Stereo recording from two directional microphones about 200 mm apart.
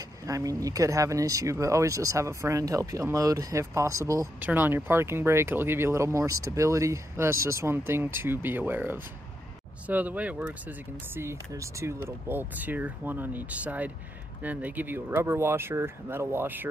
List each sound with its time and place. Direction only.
0.0 s speech: 15° right (ahead or behind)